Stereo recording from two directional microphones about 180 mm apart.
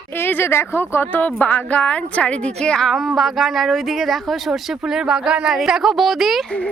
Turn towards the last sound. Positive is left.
turn(degrees=5)  # may be behind; listen again after turning